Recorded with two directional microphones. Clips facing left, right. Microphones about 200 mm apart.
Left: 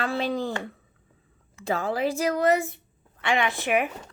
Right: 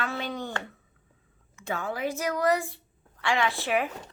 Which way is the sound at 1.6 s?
35° left (ahead or behind).